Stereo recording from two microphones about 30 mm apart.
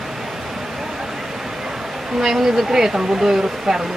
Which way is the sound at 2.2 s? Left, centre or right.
Centre.